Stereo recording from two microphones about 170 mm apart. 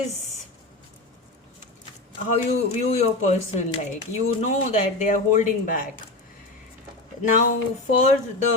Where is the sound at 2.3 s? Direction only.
35° left (ahead or behind).